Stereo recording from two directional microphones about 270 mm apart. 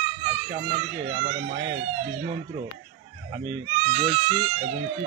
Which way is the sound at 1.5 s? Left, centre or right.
Right.